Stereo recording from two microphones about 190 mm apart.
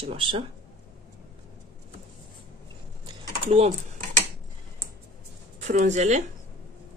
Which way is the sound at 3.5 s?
35° right (ahead or behind).